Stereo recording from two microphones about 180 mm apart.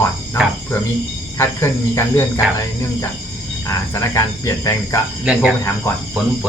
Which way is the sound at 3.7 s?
15° left (ahead or behind).